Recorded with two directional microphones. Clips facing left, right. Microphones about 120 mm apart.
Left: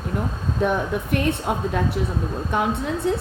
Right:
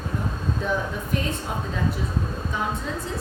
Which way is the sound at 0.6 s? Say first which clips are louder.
Left 7 dB; 65° left (ahead or behind).